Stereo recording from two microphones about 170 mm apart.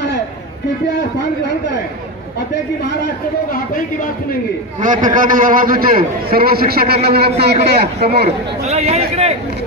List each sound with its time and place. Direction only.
4.8 s a man's voice: 50° right (ahead or behind); by 8.3 s 70° right (ahead or behind)
8.6 s speech: 40° right (ahead or behind)